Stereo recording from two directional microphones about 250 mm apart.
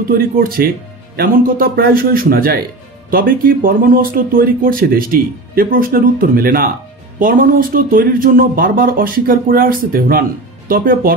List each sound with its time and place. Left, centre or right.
0.4 s speech: right